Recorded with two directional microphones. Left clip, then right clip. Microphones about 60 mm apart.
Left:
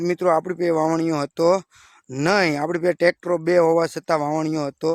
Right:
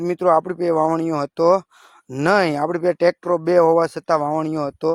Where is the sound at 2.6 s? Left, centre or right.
Centre.